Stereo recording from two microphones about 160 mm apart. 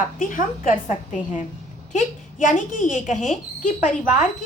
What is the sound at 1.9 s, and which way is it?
A woman's voice, 50° left (ahead or behind).